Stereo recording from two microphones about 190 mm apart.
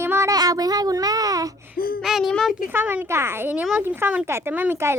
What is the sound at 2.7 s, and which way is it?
Speech, 10° right (ahead or behind).